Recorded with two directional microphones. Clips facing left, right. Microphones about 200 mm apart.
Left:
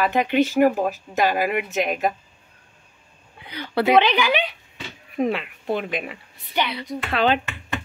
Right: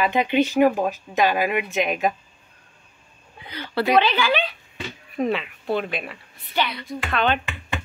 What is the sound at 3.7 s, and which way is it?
A woman's voice, 20° left (ahead or behind).